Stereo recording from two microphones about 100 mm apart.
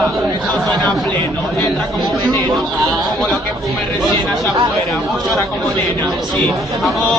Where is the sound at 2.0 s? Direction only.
Centre (ahead or behind).